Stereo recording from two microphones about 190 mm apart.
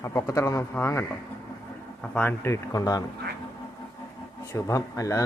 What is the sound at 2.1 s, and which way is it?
Speech, 10° left (ahead or behind).